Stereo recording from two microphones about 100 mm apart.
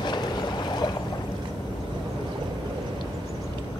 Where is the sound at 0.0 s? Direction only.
50° left (ahead or behind).